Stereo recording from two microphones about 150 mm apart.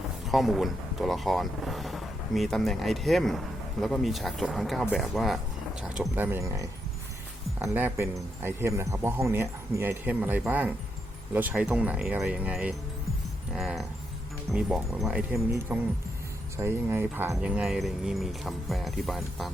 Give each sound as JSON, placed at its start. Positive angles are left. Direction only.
{"t": 0.3, "sound": "speech", "side_deg": 0}
{"t": 6.1, "sound": "speech", "side_deg": -15}
{"t": 7.7, "sound": "speech", "side_deg": -15}
{"t": 15.7, "sound": "speech", "side_deg": -15}